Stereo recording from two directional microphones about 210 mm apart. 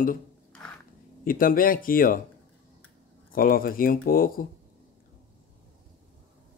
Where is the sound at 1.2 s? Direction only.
40° left (ahead or behind).